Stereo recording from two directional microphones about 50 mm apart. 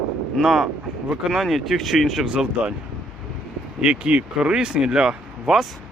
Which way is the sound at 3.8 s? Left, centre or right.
Centre.